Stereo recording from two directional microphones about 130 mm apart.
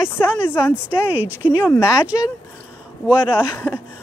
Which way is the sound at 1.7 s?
20° left (ahead or behind).